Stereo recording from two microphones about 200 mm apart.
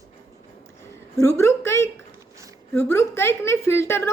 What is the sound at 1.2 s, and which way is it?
A woman's voice, 15° left (ahead or behind).